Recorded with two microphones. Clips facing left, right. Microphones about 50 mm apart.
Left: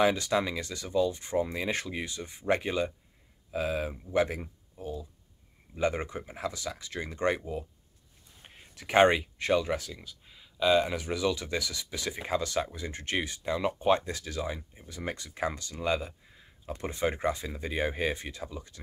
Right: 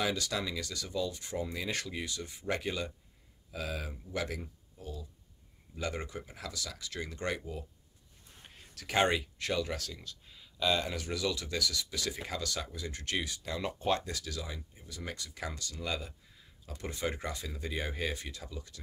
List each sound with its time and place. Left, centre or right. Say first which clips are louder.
0.0 s speech: left 8 dB; left